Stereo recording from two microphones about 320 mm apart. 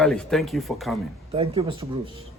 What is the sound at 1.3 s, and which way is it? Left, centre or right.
Speech, centre.